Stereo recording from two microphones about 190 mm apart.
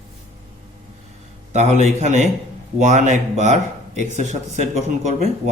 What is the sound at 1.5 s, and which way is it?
Speech, 35° right (ahead or behind).